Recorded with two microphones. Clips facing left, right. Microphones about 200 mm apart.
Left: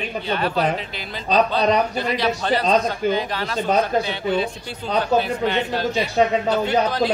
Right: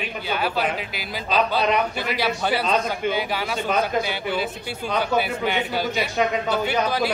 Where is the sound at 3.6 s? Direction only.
35° left (ahead or behind).